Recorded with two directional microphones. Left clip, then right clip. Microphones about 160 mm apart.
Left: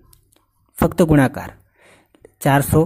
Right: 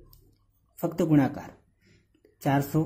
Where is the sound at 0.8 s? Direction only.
45° left (ahead or behind).